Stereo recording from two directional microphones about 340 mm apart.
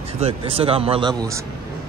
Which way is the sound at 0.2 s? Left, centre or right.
Centre.